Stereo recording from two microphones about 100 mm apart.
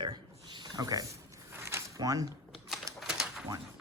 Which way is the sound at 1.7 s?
30° right (ahead or behind).